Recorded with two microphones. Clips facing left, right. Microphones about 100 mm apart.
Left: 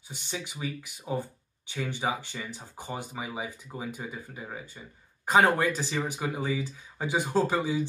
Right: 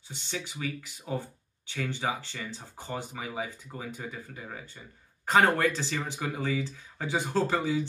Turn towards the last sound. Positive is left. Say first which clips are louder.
# left 1 dB
turn(degrees=15)  # may be behind; listen again after turning